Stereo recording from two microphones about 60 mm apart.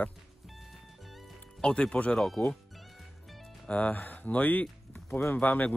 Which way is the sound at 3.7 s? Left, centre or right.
Left.